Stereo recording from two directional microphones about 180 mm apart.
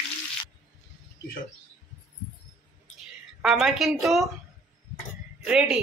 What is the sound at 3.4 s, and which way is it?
Speech, centre (ahead or behind).